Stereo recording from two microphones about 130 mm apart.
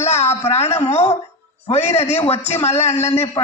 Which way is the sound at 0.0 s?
60° left (ahead or behind).